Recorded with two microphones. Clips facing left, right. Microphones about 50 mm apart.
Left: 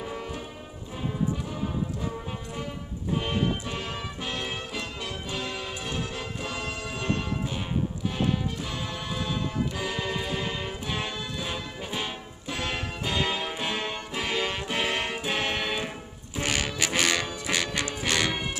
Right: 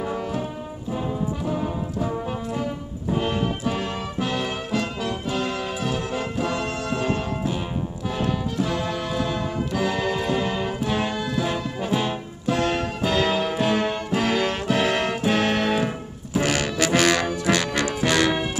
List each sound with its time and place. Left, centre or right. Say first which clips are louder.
0.0 s brass instrument: right 8 dB; centre
2.5 s music: right 7 dB; centre